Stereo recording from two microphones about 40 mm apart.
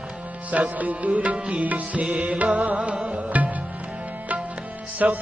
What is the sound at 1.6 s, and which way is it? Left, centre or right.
Music, right.